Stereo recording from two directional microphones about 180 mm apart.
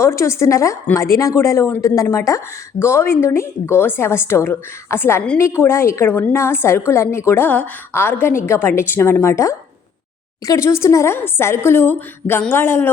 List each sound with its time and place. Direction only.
0.0 s a woman's voice: 15° left (ahead or behind)